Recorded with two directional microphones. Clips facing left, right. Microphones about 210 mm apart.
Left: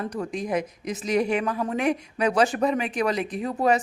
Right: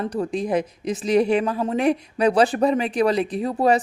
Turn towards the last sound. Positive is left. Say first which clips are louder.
# right 3 dB
turn(degrees=-35)  # may be behind; listen again after turning